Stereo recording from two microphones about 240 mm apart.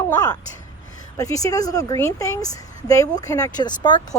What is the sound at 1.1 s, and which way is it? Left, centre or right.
A woman's voice, centre.